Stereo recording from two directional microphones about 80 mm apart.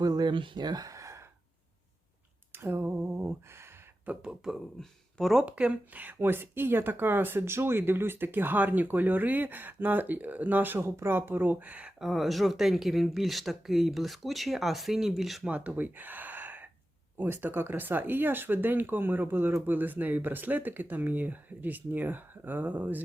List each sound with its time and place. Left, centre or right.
0.0 s speech: right
2.5 s speech: right
4.0 s speech: centre
4.5 s speech: centre
5.5 s speech: centre
12.0 s speech: centre
15.4 s speech: centre